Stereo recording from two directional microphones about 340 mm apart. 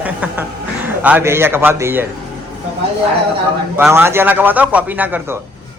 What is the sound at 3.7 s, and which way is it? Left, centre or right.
A man's voice, centre.